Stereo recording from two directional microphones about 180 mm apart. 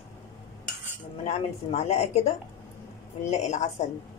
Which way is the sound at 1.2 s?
35° left (ahead or behind).